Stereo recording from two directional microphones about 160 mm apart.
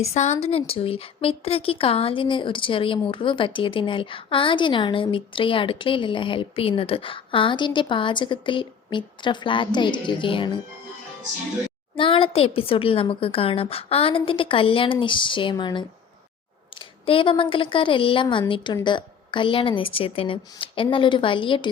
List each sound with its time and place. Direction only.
0.1 s a woman's voice: 45° left (ahead or behind)
11.9 s a woman's voice: 35° left (ahead or behind)